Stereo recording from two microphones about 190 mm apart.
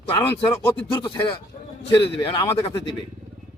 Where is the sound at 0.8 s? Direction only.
25° left (ahead or behind).